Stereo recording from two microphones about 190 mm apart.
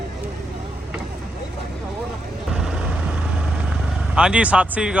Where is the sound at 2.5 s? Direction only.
5° right (ahead or behind).